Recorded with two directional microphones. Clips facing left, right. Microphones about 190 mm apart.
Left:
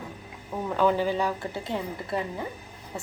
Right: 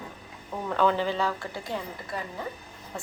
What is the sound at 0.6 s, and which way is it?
Speech, 10° left (ahead or behind).